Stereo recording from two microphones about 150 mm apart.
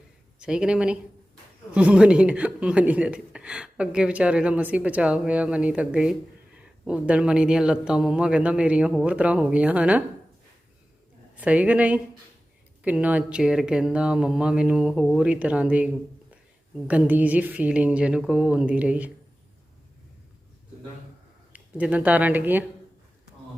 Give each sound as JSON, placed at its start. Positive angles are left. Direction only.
{"t": 0.3, "sound": "speech", "side_deg": -5}
{"t": 11.3, "sound": "speech", "side_deg": -10}
{"t": 21.5, "sound": "speech", "side_deg": -10}